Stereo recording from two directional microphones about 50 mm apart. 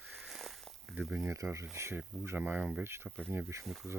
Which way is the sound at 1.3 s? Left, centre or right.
Right.